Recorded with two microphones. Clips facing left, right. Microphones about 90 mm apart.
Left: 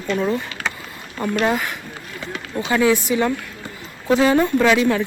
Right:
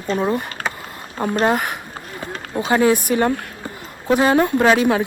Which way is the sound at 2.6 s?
40° right (ahead or behind).